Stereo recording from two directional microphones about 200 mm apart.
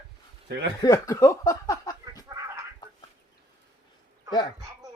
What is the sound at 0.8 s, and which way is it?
Speech, 15° left (ahead or behind).